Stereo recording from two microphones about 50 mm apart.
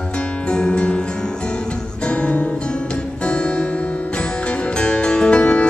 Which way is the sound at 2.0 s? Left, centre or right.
Left.